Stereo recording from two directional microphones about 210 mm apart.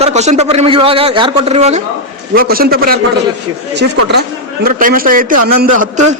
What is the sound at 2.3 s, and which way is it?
Speech, 45° right (ahead or behind).